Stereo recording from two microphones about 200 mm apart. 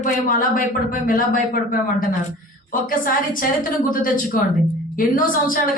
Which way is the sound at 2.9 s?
45° left (ahead or behind).